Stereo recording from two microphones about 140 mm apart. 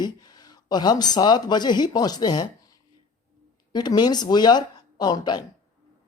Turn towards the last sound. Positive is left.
turn(degrees=30)  # may be behind; listen again after turning